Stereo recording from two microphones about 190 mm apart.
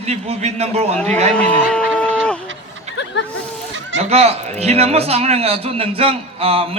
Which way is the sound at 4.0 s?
35° right (ahead or behind).